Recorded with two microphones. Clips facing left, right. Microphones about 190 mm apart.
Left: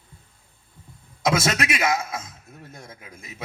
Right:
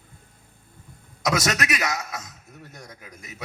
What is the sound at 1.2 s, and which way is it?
Speech, 25° left (ahead or behind).